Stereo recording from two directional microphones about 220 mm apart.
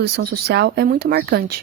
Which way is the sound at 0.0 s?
45° right (ahead or behind).